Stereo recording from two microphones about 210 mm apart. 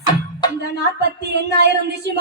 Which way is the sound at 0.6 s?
55° right (ahead or behind).